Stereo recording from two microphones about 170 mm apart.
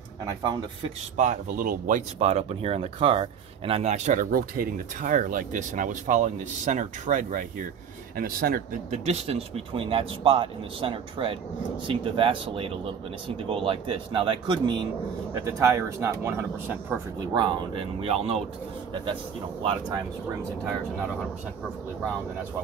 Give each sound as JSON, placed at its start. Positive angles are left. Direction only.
{"t": 1.1, "sound": "speech", "side_deg": -45}
{"t": 2.1, "sound": "speech", "side_deg": -35}
{"t": 8.2, "sound": "speech", "side_deg": -60}
{"t": 8.9, "sound": "speech", "side_deg": -40}
{"t": 15.4, "sound": "speech", "side_deg": -15}
{"t": 18.0, "sound": "speech", "side_deg": -35}
{"t": 19.6, "sound": "speech", "side_deg": -30}